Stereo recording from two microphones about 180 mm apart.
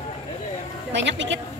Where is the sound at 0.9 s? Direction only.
90° right.